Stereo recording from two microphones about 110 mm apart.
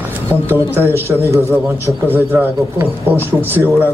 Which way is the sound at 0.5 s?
20° right (ahead or behind).